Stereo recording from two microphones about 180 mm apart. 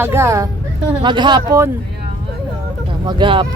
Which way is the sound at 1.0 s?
25° right (ahead or behind).